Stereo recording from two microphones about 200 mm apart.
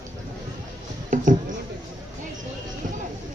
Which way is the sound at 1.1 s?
40° right (ahead or behind).